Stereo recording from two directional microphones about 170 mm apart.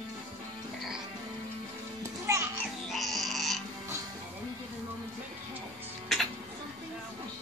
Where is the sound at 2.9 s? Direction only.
Centre (ahead or behind).